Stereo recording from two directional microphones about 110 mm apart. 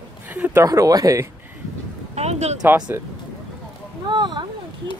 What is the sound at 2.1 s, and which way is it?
Speech, 80° right.